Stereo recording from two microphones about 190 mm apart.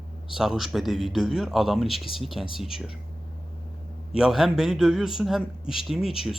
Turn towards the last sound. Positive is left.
turn(degrees=0)  # may be behind; listen again after turning